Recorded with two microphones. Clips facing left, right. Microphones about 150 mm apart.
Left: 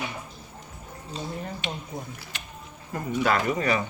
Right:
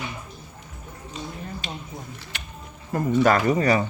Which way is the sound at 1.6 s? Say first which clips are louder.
Left 3 dB; 40° right (ahead or behind).